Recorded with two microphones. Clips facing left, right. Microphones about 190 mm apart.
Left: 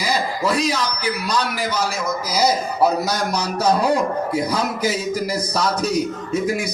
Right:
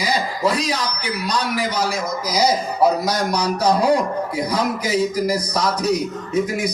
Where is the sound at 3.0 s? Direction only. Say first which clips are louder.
Right 2 dB; 25° left (ahead or behind).